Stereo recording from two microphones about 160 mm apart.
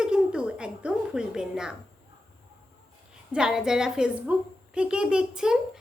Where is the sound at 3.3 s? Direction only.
5° right (ahead or behind).